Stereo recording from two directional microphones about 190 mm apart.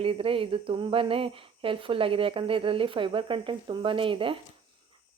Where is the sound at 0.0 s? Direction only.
30° right (ahead or behind).